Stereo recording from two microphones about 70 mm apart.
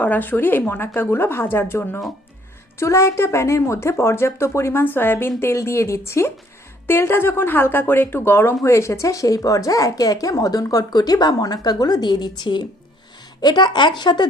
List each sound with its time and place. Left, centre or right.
0.0 s a woman's voice: left
2.7 s a woman's voice: left
4.8 s a woman's voice: left
13.4 s speech: left